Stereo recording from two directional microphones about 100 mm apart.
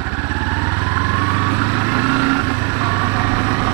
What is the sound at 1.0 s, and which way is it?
Vehicle, 20° right (ahead or behind).